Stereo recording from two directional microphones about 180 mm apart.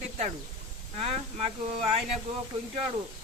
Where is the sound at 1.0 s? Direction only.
35° right (ahead or behind).